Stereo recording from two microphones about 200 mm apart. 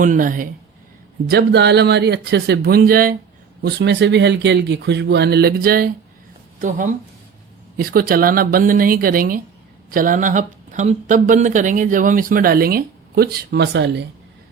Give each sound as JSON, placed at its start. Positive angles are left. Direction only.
{"t": 0.0, "sound": "speech", "side_deg": -40}
{"t": 1.3, "sound": "speech", "side_deg": -55}
{"t": 3.6, "sound": "speech", "side_deg": -60}